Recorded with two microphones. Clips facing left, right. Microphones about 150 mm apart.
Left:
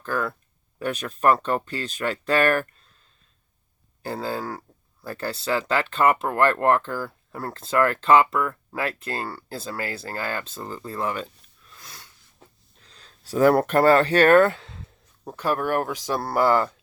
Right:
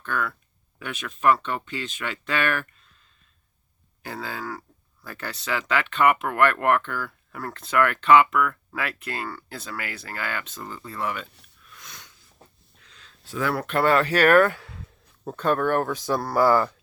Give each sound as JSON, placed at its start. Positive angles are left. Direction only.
{"t": 0.0, "sound": "speech", "side_deg": 35}
{"t": 4.0, "sound": "speech", "side_deg": 35}
{"t": 11.6, "sound": "sniff", "side_deg": 30}
{"t": 12.8, "sound": "speech", "side_deg": 35}
{"t": 15.2, "sound": "speech", "side_deg": 10}